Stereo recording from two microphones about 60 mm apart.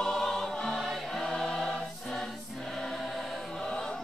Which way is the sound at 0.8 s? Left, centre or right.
Centre.